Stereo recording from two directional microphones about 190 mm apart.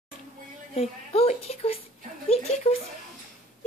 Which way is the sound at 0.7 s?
30° left (ahead or behind).